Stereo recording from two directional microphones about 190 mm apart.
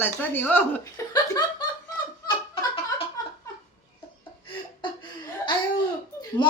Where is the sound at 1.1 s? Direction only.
20° left (ahead or behind).